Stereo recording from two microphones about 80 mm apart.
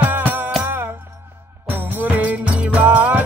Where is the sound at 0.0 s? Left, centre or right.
Right.